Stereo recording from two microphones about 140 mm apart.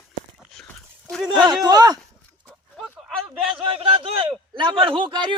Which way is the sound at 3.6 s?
40° right (ahead or behind).